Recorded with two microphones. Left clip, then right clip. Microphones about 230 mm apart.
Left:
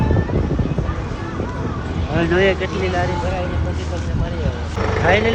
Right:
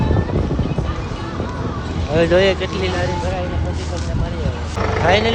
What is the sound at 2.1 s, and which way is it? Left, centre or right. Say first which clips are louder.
Speech: right 4 dB; right.